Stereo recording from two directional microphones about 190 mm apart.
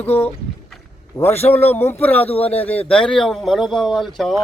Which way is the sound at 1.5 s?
10° left (ahead or behind).